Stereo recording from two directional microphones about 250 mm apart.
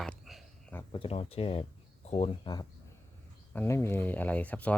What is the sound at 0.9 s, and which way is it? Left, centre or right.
Speech, left.